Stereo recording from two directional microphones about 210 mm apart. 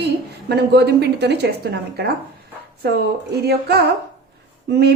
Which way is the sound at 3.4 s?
50° right (ahead or behind).